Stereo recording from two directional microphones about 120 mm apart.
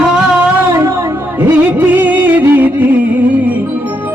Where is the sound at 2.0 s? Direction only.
15° right (ahead or behind).